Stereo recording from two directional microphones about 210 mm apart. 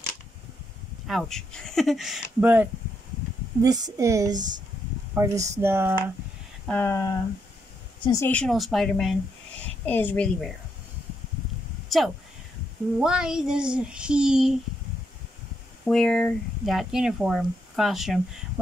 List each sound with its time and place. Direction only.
1.0 s speech: centre (ahead or behind)
3.6 s speech: 20° right (ahead or behind)
6.7 s speech: 10° left (ahead or behind)
11.9 s speech: centre (ahead or behind)
15.8 s speech: 5° left (ahead or behind)